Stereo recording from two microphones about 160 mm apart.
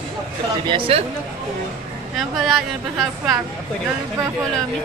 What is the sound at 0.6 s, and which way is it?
Speech, 30° right (ahead or behind).